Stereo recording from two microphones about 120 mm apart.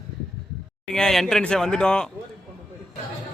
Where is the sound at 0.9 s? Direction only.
5° left (ahead or behind).